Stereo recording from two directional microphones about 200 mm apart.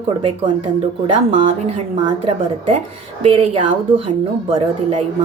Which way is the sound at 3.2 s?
30° right (ahead or behind).